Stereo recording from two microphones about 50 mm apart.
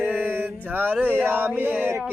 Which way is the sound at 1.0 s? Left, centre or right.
Right.